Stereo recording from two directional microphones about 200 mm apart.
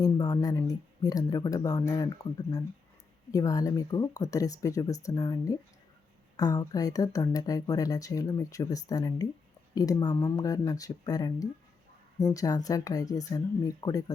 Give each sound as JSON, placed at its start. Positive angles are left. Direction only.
{"t": 0.0, "sound": "speech", "side_deg": 20}